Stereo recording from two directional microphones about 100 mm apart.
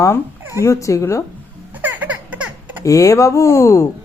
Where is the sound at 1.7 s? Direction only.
15° right (ahead or behind).